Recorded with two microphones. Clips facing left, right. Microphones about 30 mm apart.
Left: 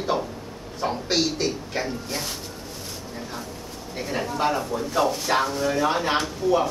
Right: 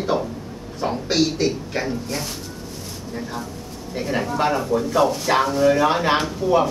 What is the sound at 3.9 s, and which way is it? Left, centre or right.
Speech, centre.